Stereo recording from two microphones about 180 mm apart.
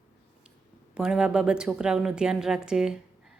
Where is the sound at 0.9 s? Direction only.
5° right (ahead or behind).